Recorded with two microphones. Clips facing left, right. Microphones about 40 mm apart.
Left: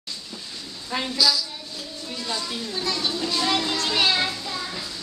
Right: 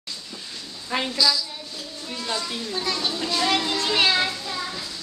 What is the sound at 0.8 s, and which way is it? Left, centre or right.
Speech, centre.